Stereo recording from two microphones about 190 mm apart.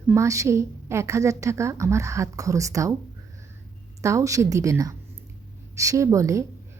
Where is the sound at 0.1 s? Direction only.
15° right (ahead or behind).